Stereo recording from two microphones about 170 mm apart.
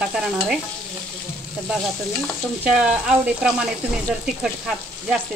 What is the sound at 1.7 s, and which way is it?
Frying, centre (ahead or behind).